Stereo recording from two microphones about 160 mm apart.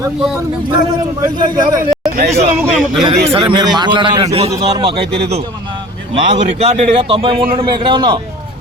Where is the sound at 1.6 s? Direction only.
60° right (ahead or behind).